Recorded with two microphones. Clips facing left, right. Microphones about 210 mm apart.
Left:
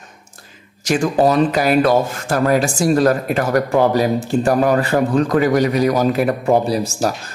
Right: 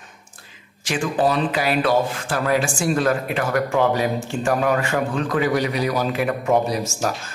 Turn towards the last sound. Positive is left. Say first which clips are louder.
# left 4 dB
turn(degrees=35)  # may be behind; listen again after turning